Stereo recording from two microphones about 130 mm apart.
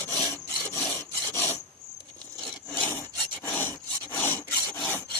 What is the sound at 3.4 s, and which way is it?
Rub, 20° left (ahead or behind).